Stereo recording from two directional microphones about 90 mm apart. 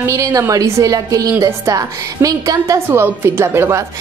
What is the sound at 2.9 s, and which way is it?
Speech, 25° right (ahead or behind).